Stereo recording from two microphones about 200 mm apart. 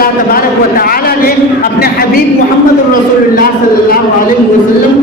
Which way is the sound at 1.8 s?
50° left (ahead or behind).